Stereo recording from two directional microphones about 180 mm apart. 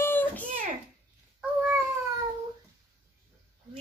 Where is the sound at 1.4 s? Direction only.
10° right (ahead or behind).